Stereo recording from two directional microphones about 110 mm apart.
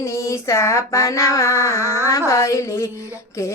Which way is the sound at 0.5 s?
25° left (ahead or behind).